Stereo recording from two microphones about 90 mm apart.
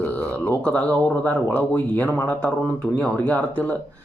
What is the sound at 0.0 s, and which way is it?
Speech, 20° left (ahead or behind).